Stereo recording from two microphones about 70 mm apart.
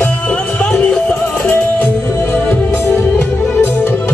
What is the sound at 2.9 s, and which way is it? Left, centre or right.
Music, left.